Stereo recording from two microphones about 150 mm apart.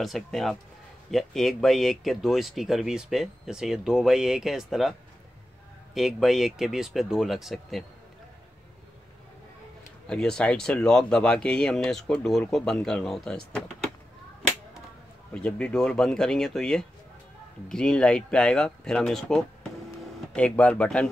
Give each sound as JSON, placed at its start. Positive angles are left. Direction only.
{"t": 0.0, "sound": "speech", "side_deg": 0}
{"t": 5.9, "sound": "speech", "side_deg": 0}
{"t": 10.0, "sound": "speech", "side_deg": 5}
{"t": 15.3, "sound": "speech", "side_deg": 5}